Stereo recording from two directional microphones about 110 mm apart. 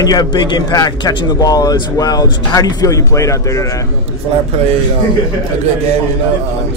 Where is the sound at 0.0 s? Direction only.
35° left (ahead or behind).